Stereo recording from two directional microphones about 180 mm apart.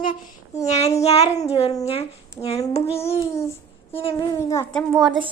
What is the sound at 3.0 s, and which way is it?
Speech, 15° left (ahead or behind).